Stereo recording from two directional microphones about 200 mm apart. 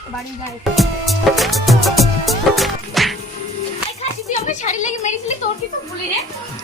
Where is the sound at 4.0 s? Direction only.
35° left (ahead or behind).